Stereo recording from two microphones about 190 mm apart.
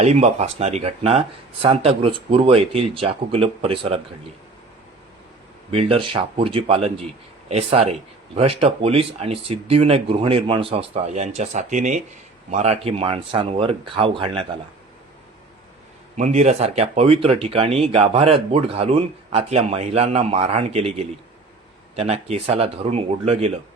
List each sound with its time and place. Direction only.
0.0 s speech: 35° right (ahead or behind)
5.7 s speech: 30° right (ahead or behind)
16.1 s speech: 40° right (ahead or behind)
21.9 s speech: 35° right (ahead or behind)